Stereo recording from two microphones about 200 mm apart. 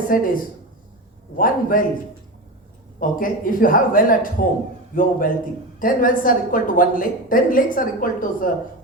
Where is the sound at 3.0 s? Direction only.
45° left (ahead or behind).